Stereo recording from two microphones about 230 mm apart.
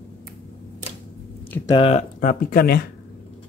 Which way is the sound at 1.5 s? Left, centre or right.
Centre.